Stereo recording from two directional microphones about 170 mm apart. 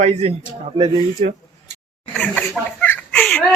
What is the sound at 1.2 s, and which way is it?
Speech, 50° right (ahead or behind).